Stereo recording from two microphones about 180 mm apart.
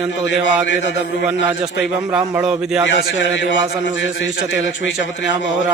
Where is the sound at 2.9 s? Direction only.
85° left.